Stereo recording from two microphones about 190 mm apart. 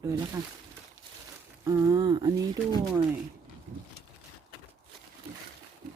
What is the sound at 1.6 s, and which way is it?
Speech, 15° right (ahead or behind).